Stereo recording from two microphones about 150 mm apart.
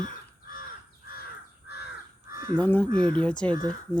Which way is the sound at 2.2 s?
75° left (ahead or behind).